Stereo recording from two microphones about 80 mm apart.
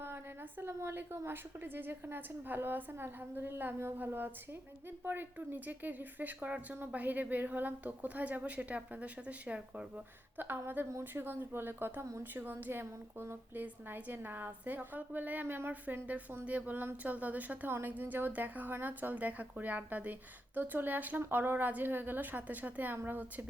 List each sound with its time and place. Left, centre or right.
0.6 s a woman's voice: right; by 9.8 s centre
10.3 s a woman's voice: right